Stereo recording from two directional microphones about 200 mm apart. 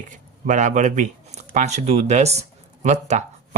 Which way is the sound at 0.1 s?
40° right (ahead or behind).